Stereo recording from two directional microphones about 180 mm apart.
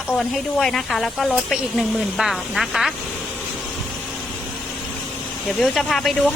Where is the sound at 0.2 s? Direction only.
Centre (ahead or behind).